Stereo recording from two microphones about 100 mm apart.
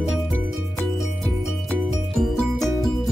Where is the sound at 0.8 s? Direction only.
5° left (ahead or behind).